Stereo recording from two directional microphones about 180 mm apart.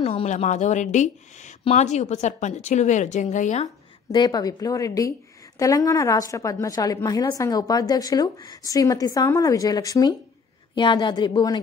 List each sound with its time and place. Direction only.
0.0 s a woman's voice: 35° left (ahead or behind)
4.1 s a woman's voice: 20° left (ahead or behind)